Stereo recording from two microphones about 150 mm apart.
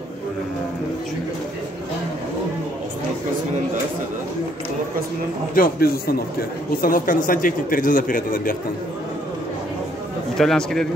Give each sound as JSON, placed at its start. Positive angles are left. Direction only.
{"t": 5.5, "sound": "speech", "side_deg": 80}
{"t": 6.8, "sound": "a man's voice", "side_deg": 65}
{"t": 10.3, "sound": "a man's voice", "side_deg": 0}